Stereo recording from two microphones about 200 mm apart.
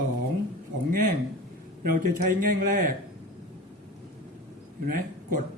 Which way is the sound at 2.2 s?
40° right (ahead or behind).